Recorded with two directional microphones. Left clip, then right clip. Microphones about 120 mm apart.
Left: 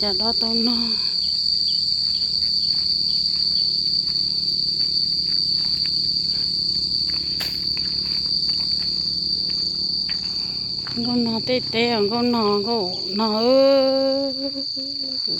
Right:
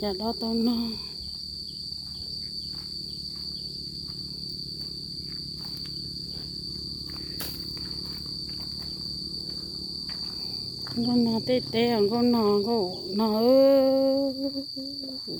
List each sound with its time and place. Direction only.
0.0 s speech: 30° right (ahead or behind)
11.1 s speech: 15° right (ahead or behind)
11.4 s cricket: 20° right (ahead or behind)